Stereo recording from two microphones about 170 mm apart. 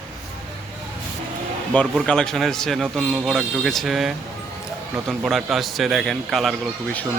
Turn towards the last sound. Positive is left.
turn(degrees=0)  # may be behind; listen again after turning